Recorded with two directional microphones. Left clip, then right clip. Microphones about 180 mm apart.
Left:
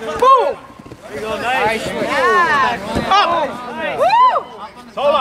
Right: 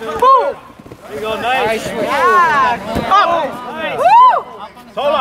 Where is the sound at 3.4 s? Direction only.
45° right (ahead or behind).